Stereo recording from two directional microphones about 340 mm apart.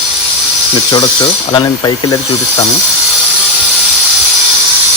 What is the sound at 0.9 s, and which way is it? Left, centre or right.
Wood, centre.